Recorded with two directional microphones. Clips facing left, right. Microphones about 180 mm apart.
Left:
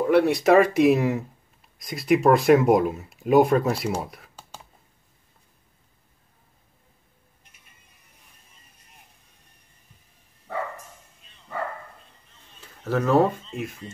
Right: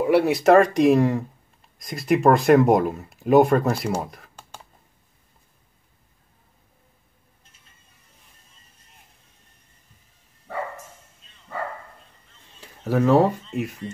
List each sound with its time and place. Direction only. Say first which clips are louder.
0.0 s speech: right 1 dB; 5° right (ahead or behind)
7.4 s music: even; 15° left (ahead or behind)
12.8 s speech: right 2 dB; 10° right (ahead or behind)